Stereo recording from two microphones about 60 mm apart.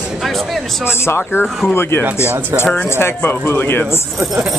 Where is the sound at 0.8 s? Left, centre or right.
Left.